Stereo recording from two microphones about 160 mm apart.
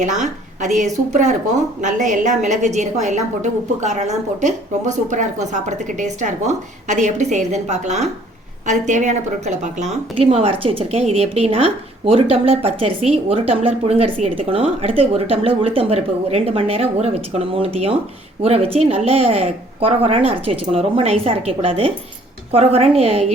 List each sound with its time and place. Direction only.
0.0 s a woman's voice: 50° right (ahead or behind)